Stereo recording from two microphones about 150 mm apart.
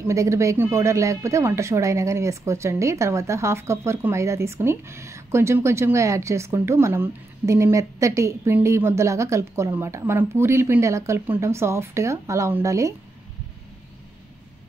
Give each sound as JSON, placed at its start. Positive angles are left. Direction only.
{"t": 0.0, "sound": "speech", "side_deg": -20}